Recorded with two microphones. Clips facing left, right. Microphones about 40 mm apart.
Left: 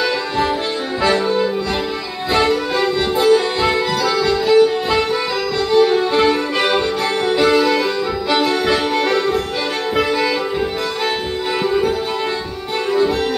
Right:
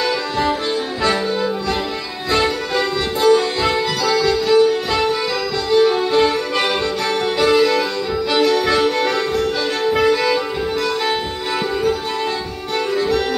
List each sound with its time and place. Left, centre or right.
0.0 s music: centre
2.3 s music: centre
12.9 s music: centre